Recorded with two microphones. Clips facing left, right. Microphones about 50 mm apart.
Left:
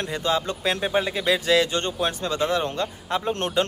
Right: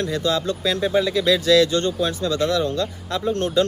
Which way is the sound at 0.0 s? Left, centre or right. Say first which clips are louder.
Right 3 dB; left.